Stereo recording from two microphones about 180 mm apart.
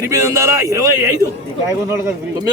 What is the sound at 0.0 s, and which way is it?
Speech, 15° right (ahead or behind).